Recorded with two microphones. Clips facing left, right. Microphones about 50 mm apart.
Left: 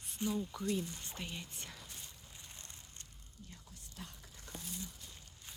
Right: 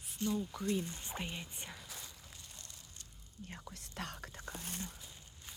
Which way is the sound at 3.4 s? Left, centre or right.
Right.